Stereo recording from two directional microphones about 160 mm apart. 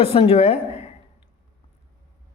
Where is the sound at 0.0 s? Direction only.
40° left (ahead or behind).